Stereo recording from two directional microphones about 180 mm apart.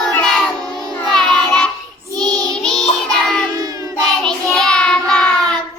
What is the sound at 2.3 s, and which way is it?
Child singing, 20° right (ahead or behind).